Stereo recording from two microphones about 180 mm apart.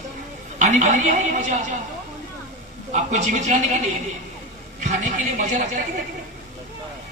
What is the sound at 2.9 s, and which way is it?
Speech, 40° right (ahead or behind).